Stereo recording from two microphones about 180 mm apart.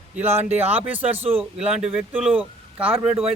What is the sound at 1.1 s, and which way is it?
Speech, 35° right (ahead or behind).